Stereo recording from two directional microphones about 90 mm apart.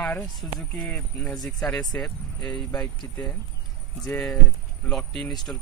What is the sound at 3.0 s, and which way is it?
Speech, 25° left (ahead or behind).